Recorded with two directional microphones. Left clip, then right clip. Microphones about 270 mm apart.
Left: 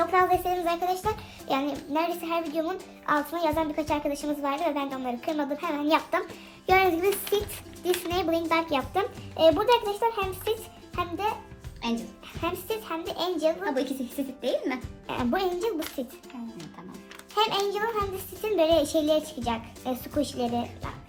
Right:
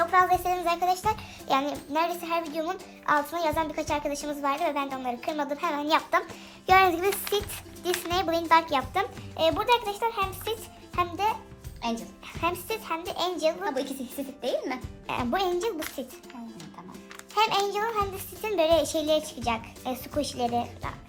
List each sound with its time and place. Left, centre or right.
0.1 s a child's voice: centre
17.3 s a child's voice: right